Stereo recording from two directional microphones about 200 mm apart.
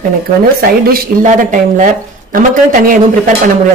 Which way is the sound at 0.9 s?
40° right (ahead or behind).